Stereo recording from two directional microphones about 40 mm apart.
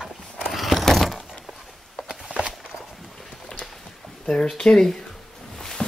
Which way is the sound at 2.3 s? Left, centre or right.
Right.